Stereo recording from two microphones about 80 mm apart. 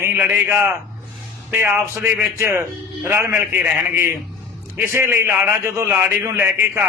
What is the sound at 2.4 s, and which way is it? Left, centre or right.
A man's voice, right.